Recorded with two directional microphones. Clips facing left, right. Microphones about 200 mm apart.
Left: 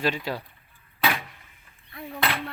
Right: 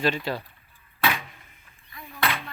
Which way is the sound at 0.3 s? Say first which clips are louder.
Right 1 dB; 10° left (ahead or behind).